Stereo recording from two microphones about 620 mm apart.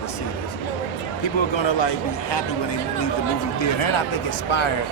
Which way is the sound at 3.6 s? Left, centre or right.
Left.